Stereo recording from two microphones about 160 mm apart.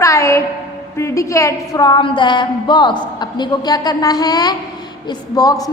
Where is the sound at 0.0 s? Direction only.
20° left (ahead or behind).